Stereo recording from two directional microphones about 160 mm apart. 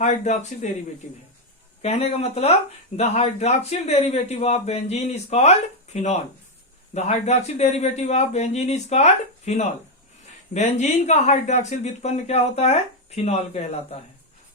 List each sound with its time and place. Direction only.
0.0 s speech: 45° left (ahead or behind)
1.8 s speech: 40° left (ahead or behind)